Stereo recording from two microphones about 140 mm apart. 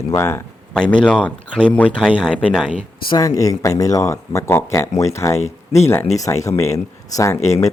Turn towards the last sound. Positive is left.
turn(degrees=50)  # may be behind; listen again after turning